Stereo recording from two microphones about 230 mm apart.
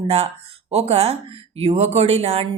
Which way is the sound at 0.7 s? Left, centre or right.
Right.